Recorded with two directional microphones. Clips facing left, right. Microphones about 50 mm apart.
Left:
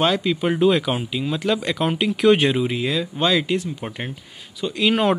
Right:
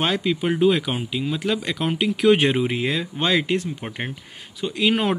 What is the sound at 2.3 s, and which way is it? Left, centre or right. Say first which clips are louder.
Speech: even; right.